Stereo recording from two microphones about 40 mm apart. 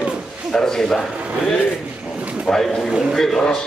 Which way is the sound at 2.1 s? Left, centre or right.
Right.